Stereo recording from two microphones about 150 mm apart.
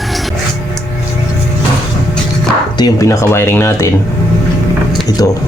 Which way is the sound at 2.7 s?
25° left (ahead or behind).